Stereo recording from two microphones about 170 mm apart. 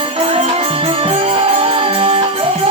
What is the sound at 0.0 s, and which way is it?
Music, 35° right (ahead or behind).